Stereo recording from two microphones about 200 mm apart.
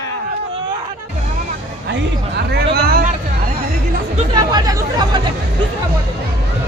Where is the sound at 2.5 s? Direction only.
50° right (ahead or behind).